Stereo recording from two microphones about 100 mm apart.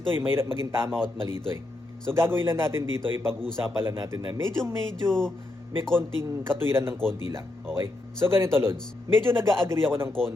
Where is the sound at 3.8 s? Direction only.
25° right (ahead or behind).